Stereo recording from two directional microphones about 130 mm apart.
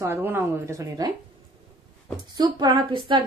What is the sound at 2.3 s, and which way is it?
Speech, 30° right (ahead or behind).